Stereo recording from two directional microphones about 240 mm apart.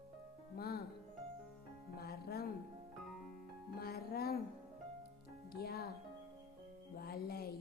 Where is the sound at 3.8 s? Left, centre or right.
Left.